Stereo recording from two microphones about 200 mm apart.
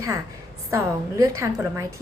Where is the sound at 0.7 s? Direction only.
15° right (ahead or behind).